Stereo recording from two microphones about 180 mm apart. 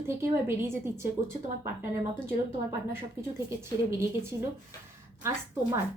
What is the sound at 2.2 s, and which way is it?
A woman's voice, 15° right (ahead or behind).